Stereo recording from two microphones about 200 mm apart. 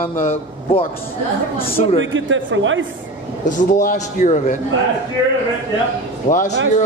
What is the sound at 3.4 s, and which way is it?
Speech, 40° left (ahead or behind).